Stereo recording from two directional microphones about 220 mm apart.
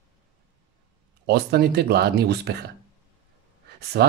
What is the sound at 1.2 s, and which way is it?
Speech, 45° right (ahead or behind).